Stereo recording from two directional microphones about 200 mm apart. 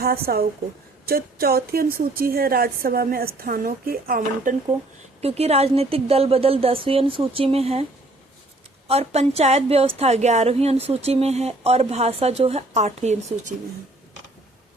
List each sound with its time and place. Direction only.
0.0 s a woman's voice: 50° right (ahead or behind)
5.2 s a woman's voice: 30° right (ahead or behind)
8.9 s a woman's voice: 30° right (ahead or behind)